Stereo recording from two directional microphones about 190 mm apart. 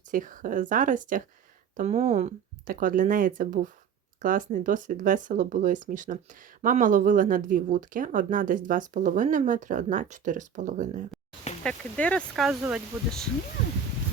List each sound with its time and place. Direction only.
0.1 s speech: 45° right (ahead or behind)
11.6 s speech: 5° left (ahead or behind)